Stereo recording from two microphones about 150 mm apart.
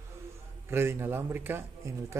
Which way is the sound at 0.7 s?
15° right (ahead or behind).